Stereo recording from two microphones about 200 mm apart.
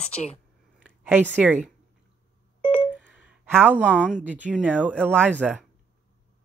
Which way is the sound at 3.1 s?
5° right (ahead or behind).